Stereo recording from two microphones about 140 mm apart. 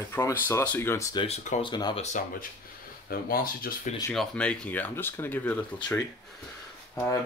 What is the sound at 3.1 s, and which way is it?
Speech, 90° left.